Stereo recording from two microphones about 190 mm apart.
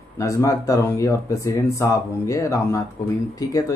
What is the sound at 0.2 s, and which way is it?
Speech, 15° left (ahead or behind).